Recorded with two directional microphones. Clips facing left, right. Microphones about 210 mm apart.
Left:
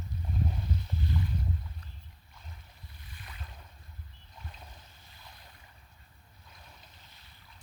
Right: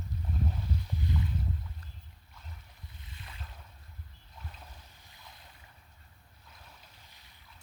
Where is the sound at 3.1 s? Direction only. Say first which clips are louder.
Even; 25° right (ahead or behind).